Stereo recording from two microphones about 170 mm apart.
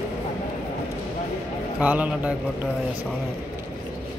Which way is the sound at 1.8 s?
10° right (ahead or behind).